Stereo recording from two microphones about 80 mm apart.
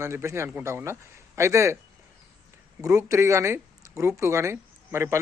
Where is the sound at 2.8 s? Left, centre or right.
Right.